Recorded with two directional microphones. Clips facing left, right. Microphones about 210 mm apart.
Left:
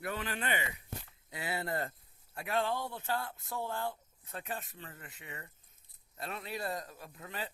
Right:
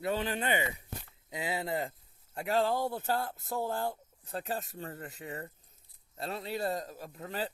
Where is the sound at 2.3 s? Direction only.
30° right (ahead or behind).